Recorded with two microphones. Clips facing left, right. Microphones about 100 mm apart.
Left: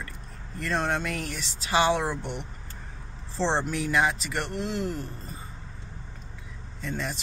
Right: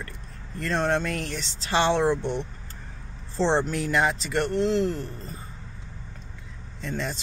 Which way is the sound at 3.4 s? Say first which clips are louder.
Right 3 dB; centre (ahead or behind).